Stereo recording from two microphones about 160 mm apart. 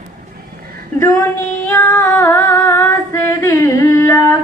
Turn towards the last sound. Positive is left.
turn(degrees=20)  # may be behind; listen again after turning